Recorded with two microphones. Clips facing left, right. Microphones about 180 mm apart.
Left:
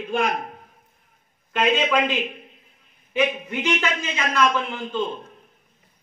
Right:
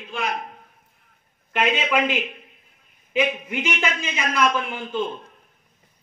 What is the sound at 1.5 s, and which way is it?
Speech, 5° right (ahead or behind).